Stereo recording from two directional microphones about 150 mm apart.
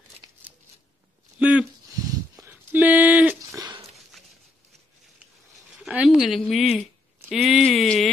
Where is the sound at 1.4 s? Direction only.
10° right (ahead or behind).